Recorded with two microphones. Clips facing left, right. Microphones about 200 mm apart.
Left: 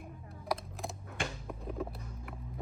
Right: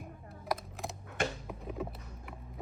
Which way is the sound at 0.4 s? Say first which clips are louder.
Even; centre (ahead or behind).